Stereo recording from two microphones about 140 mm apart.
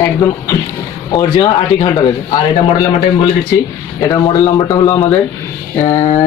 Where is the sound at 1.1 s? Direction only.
30° left (ahead or behind).